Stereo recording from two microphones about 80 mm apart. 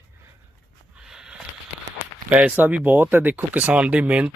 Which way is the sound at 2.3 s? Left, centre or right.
Centre.